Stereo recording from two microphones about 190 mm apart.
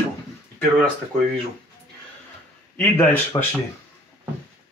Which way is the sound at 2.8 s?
10° left (ahead or behind).